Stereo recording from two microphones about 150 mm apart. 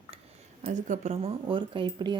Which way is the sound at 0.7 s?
50° right (ahead or behind).